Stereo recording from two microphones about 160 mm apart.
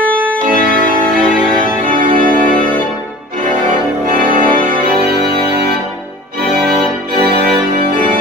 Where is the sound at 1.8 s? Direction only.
60° right (ahead or behind).